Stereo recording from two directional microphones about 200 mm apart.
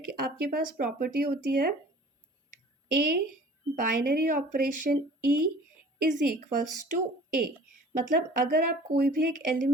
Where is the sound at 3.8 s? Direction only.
45° right (ahead or behind).